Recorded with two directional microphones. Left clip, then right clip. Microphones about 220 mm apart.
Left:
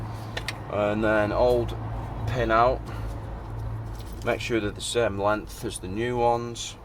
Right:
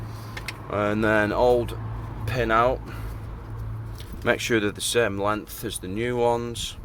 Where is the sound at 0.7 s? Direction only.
35° right (ahead or behind).